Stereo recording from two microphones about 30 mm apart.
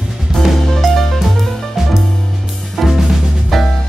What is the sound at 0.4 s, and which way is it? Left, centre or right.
Music, left.